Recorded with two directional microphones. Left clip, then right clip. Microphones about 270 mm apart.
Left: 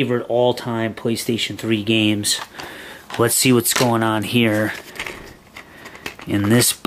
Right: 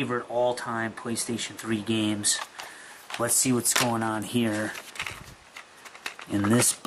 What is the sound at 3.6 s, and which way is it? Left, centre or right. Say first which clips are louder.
Speech: left 7 dB; centre.